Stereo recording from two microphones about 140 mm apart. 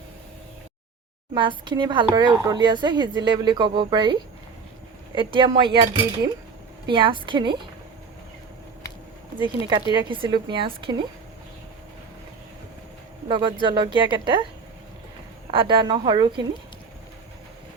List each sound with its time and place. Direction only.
1.3 s speech: 35° right (ahead or behind)
9.4 s speech: 35° right (ahead or behind)
13.2 s speech: 35° right (ahead or behind)
15.4 s speech: 35° right (ahead or behind)